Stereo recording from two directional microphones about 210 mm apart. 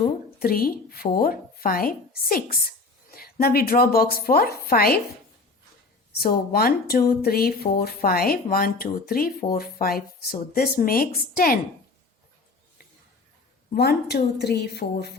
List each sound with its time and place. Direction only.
0.0 s a woman's voice: 45° left (ahead or behind)
6.1 s speech: 45° left (ahead or behind)
13.7 s speech: 50° left (ahead or behind)